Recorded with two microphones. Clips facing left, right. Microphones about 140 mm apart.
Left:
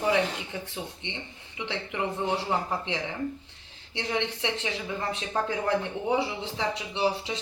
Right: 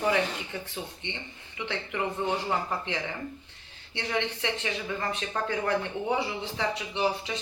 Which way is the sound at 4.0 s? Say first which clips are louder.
Left 1 dB; 25° left (ahead or behind).